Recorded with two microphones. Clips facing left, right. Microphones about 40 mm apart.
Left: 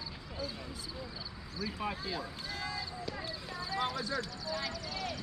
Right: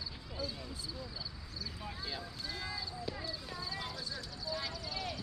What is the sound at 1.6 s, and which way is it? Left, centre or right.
Speech, left.